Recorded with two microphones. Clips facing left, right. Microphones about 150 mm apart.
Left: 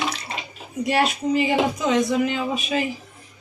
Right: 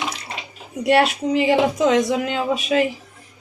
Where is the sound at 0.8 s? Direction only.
75° right (ahead or behind).